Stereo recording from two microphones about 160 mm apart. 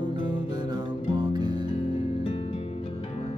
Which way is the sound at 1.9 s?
35° left (ahead or behind).